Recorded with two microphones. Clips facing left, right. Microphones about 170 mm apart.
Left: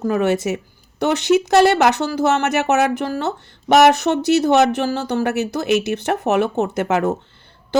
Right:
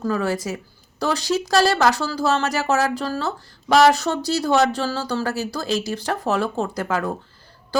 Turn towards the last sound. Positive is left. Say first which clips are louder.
# left 6 dB
turn(degrees=25)  # may be behind; listen again after turning